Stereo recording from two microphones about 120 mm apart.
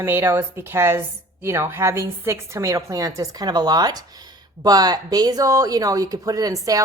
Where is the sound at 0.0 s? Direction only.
25° right (ahead or behind).